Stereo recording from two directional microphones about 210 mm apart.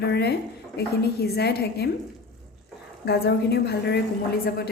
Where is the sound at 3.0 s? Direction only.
50° left (ahead or behind).